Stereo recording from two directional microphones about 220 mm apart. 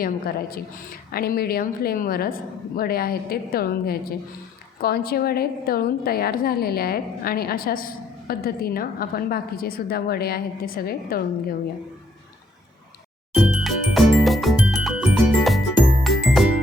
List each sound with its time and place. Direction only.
0.0 s a woman's voice: 45° left (ahead or behind)
13.3 s music: 5° right (ahead or behind)